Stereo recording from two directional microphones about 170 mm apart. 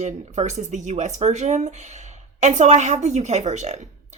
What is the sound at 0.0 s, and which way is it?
Speech, 40° right (ahead or behind).